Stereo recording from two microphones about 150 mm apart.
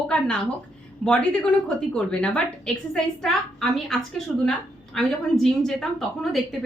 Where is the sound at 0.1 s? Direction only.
5° left (ahead or behind).